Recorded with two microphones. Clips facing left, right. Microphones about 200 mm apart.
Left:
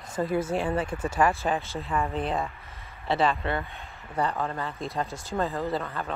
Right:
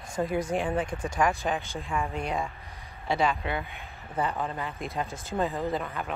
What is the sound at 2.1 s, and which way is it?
Speech, 30° left (ahead or behind).